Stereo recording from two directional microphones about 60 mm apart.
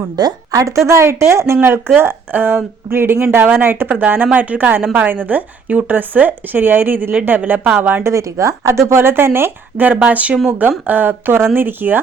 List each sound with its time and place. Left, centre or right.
0.2 s a woman's voice: right
0.9 s speech: right
2.0 s speech: right
8.0 s speech: right
8.9 s speech: right